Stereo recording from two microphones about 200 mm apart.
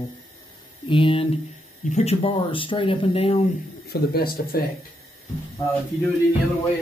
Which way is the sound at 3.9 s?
50° left (ahead or behind).